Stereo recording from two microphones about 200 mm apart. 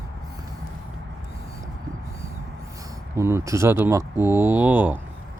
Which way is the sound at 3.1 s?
15° right (ahead or behind).